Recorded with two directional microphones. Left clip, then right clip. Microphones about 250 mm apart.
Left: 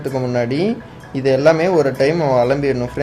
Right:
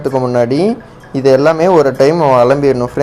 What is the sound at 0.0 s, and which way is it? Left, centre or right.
Speech, centre.